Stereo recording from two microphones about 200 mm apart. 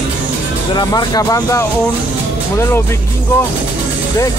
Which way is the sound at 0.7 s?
20° left (ahead or behind).